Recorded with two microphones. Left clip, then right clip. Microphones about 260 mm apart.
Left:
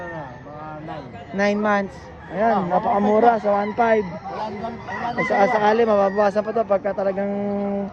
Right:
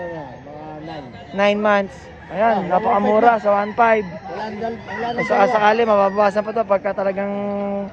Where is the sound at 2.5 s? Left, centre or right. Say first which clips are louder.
Right 2 dB; right.